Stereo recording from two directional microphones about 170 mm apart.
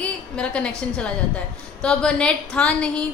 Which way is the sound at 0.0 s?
5° left (ahead or behind).